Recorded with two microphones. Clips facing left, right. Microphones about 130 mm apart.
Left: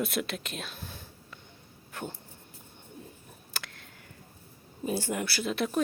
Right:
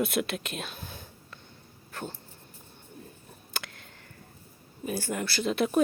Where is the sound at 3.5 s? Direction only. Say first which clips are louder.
Right 3 dB; centre (ahead or behind).